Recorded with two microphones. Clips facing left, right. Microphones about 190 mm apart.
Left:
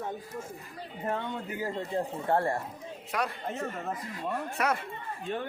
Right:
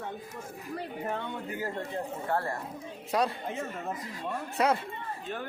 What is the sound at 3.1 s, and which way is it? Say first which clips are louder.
Speech: right 4 dB; 35° right (ahead or behind).